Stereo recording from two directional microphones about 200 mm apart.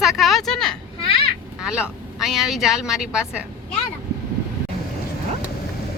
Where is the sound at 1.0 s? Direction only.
30° left (ahead or behind).